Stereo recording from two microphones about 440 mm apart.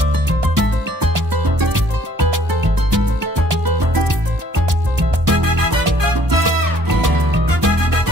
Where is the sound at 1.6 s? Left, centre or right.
Right.